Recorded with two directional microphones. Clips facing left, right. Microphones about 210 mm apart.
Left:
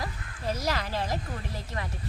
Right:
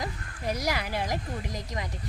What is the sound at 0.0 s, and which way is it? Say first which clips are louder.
Speech: right 1 dB; 15° right (ahead or behind).